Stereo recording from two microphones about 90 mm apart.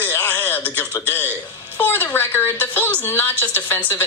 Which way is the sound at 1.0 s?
20° left (ahead or behind).